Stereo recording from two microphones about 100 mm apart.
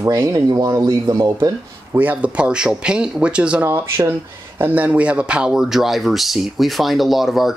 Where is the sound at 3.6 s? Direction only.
30° right (ahead or behind).